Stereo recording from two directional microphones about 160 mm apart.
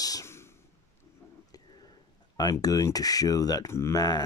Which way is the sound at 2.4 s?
25° left (ahead or behind).